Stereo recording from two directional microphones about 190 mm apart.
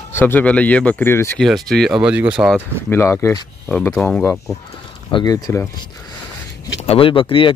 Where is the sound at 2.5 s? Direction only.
10° left (ahead or behind).